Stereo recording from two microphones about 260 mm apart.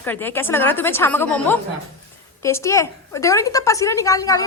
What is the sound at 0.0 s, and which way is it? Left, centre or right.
A woman's voice, centre.